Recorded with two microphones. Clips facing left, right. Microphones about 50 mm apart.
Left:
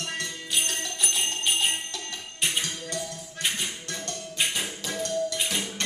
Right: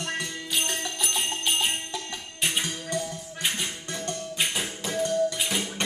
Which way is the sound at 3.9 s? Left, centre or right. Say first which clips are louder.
Right 3 dB; centre.